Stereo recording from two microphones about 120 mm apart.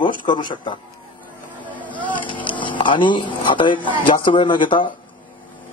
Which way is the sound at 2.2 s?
45° left (ahead or behind).